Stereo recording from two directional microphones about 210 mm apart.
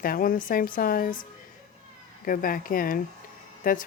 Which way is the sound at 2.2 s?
40° left (ahead or behind).